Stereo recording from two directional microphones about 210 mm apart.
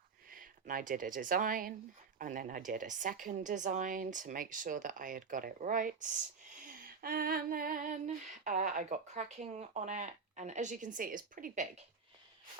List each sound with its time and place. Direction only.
0.3 s speech: 40° right (ahead or behind)
2.1 s female singing: 40° right (ahead or behind)